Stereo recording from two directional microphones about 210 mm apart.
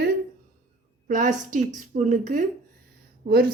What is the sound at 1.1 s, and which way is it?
Speech, 40° right (ahead or behind).